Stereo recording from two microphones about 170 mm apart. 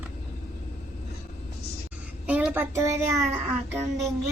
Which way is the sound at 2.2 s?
10° right (ahead or behind).